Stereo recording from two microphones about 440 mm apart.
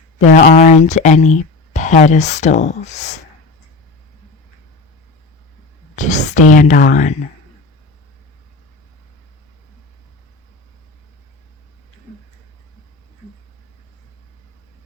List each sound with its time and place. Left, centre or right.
0.2 s speech: centre
6.0 s speech: centre